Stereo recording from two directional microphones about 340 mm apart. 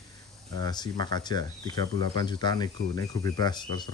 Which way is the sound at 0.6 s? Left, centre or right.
Centre.